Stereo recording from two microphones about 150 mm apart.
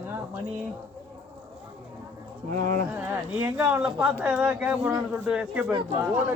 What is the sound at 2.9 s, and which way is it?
Speech, 15° right (ahead or behind).